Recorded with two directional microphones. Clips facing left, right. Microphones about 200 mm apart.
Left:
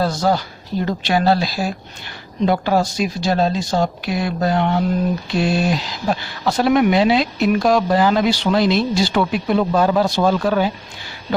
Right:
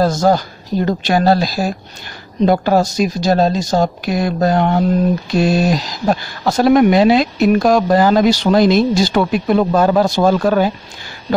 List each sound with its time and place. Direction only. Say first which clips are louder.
0.0 s speech: right 5 dB; 45° right (ahead or behind)